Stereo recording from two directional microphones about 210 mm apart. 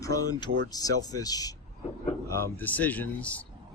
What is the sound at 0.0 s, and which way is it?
Speech, 15° left (ahead or behind).